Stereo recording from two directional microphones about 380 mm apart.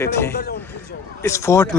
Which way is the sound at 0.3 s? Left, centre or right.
Left.